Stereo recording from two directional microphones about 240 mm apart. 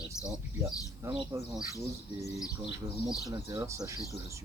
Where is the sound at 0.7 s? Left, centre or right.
Centre.